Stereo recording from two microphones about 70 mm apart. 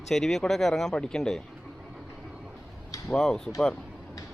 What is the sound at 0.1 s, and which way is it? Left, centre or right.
Speech, centre.